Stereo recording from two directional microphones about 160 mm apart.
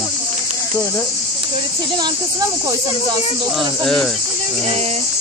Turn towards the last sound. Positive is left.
turn(degrees=5)  # may be behind; listen again after turning